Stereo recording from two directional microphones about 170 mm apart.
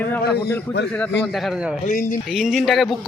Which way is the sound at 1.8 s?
50° left (ahead or behind).